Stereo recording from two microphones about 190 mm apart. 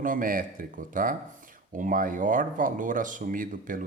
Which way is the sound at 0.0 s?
45° right (ahead or behind).